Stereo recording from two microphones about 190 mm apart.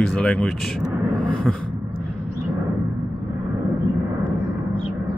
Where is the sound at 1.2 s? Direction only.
5° left (ahead or behind).